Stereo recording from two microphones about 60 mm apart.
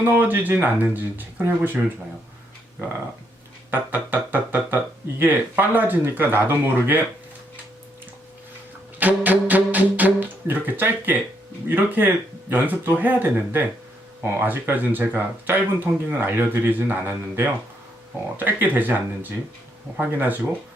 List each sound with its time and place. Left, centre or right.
0.0 s speech: right
3.7 s speech: right
9.0 s music: right
11.7 s speech: right